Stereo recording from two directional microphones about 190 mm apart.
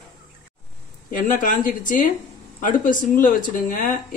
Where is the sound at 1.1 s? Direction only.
45° left (ahead or behind).